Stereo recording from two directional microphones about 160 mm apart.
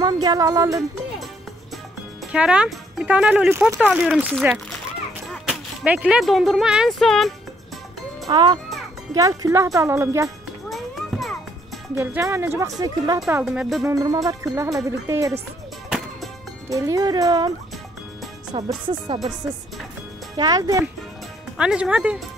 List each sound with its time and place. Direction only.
0.0 s speech: 25° right (ahead or behind)
2.3 s speech: 5° right (ahead or behind)
8.3 s speech: 30° right (ahead or behind)
10.7 s music: centre (ahead or behind)
11.9 s speech: 15° right (ahead or behind)
13.3 s speech: 5° right (ahead or behind)
13.8 s speech: 20° right (ahead or behind)
16.6 s speech: 20° right (ahead or behind)
18.5 s speech: 30° right (ahead or behind)
20.3 s speech: 25° right (ahead or behind)
21.5 s speech: 5° right (ahead or behind)